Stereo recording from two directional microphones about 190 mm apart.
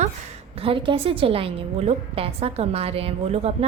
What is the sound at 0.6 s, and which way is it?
A woman's voice, 25° right (ahead or behind).